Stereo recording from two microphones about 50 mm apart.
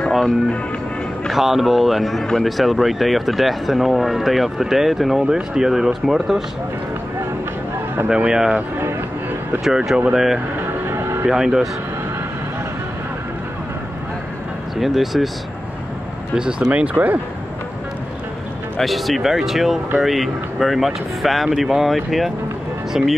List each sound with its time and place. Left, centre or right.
1.3 s speech: centre
8.1 s speech: centre
9.7 s speech: centre
10.9 s a sound: right
11.2 s speech: centre
14.8 s speech: centre
16.3 s speech: centre
16.9 s speech: right
18.8 s speech: centre